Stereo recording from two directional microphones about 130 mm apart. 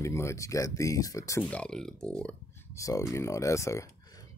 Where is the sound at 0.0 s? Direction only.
20° left (ahead or behind).